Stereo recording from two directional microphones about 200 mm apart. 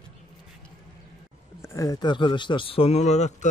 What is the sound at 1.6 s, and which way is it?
A man's voice, 15° left (ahead or behind).